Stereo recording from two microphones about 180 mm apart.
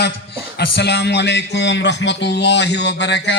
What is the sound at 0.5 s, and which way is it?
Speech, 65° left (ahead or behind).